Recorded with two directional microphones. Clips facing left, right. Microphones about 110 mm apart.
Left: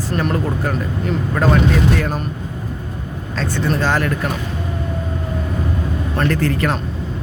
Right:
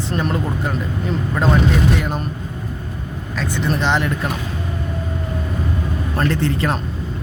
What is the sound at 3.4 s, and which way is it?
Speech, 15° right (ahead or behind).